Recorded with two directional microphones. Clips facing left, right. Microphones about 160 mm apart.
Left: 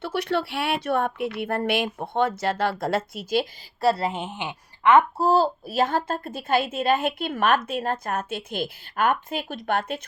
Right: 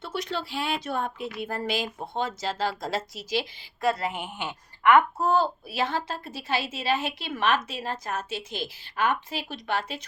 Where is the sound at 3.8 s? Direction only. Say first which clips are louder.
Left 4 dB; 30° left (ahead or behind).